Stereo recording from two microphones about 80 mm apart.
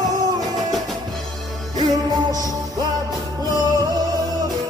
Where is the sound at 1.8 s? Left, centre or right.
Right.